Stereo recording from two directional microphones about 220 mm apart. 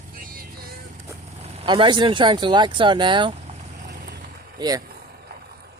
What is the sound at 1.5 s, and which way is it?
Speech, 25° right (ahead or behind).